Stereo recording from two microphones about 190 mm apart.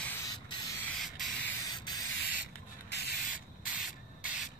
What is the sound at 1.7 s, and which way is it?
Sanding, 20° left (ahead or behind).